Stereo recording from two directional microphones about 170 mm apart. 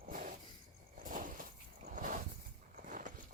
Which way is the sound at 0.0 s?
55° right (ahead or behind).